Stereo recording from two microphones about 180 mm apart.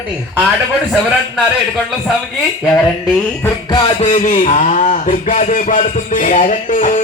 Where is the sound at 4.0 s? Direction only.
40° left (ahead or behind).